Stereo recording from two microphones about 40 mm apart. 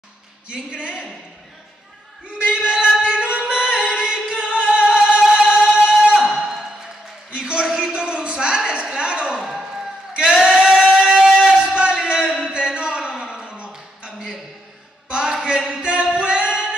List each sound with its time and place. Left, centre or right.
0.5 s a woman's voice: right
2.3 s music: right
7.3 s a sound: right
10.1 s singing: right
12.1 s music: right
12.4 s a sound: right